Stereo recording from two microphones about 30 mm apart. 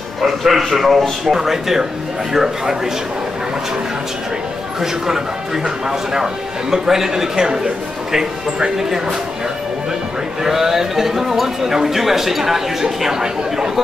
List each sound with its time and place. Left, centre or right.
0.2 s speech: centre
5.0 s speech: centre
10.4 s speech: centre